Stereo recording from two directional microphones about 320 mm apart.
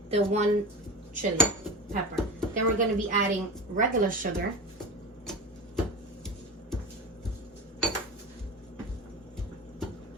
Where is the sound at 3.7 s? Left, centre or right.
Right.